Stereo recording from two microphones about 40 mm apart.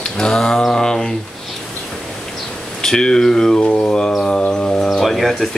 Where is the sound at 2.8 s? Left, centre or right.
Centre.